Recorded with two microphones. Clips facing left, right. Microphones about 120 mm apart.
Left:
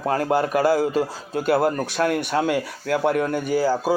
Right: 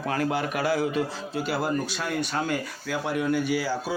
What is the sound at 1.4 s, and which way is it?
Speech, 55° left (ahead or behind).